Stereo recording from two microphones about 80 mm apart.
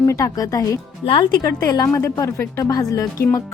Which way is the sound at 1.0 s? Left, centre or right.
Left.